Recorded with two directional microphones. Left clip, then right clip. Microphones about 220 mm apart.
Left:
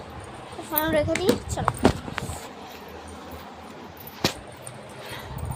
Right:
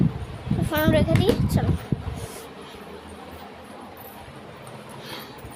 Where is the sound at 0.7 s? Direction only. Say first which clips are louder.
Right 3 dB; 25° right (ahead or behind).